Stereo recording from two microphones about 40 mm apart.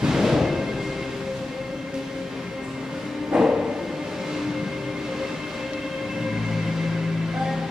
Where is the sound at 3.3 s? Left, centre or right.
Centre.